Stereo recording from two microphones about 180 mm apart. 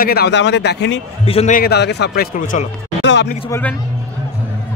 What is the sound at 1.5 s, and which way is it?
A man's voice, 60° left (ahead or behind).